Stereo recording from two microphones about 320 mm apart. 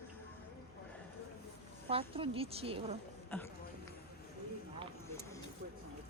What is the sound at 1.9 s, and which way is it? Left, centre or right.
Speech, centre.